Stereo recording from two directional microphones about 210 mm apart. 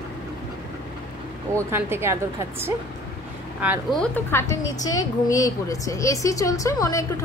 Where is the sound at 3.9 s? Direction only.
10° left (ahead or behind).